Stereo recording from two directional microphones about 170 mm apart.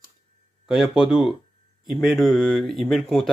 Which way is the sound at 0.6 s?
5° right (ahead or behind).